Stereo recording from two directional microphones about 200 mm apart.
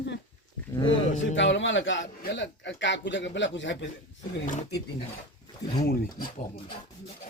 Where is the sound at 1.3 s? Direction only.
65° left (ahead or behind).